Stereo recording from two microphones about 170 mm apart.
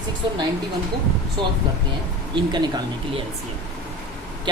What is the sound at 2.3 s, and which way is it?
Speech, 25° right (ahead or behind).